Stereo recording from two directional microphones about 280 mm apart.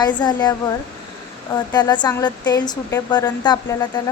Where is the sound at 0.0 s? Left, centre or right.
Centre.